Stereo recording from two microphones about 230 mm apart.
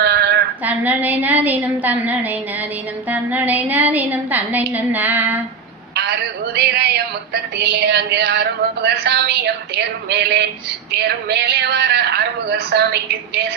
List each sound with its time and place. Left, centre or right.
0.0 s a sound: right
0.6 s a woman's voice: centre
5.9 s a woman's voice: right